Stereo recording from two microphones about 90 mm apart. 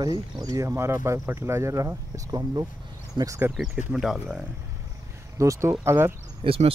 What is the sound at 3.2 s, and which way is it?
Speech, 55° right (ahead or behind).